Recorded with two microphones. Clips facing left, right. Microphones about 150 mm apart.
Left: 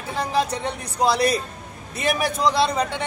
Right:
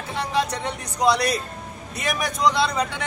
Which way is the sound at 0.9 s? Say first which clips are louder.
Left 1 dB; 30° left (ahead or behind).